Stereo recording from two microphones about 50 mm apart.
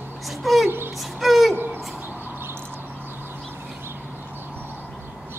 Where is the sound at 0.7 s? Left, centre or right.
Right.